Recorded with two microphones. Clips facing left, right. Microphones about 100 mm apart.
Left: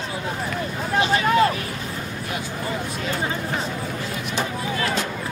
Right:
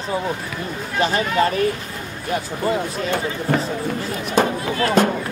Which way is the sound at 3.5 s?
60° right (ahead or behind).